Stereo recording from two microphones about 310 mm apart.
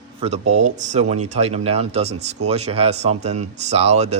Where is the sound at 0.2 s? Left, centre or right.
Right.